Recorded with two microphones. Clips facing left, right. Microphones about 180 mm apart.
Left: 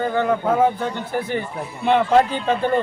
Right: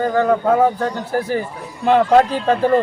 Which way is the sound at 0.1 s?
Centre (ahead or behind).